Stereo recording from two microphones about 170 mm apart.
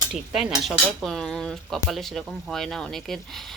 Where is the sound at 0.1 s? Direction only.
Centre (ahead or behind).